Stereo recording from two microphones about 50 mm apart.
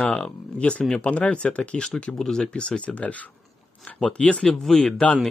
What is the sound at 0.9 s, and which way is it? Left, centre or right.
Speech, left.